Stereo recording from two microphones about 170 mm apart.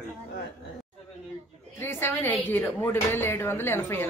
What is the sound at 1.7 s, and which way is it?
Speech, 15° left (ahead or behind).